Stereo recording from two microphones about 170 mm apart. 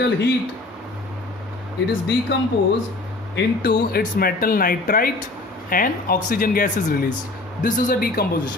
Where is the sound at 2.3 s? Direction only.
90° left.